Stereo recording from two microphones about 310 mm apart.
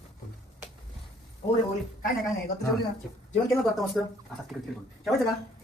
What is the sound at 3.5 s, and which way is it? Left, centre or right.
Speech, centre.